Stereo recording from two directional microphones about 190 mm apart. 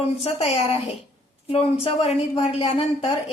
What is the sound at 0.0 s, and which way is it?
A woman's voice, 30° left (ahead or behind).